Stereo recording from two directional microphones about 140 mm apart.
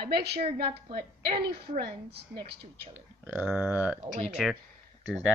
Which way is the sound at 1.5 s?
35° right (ahead or behind).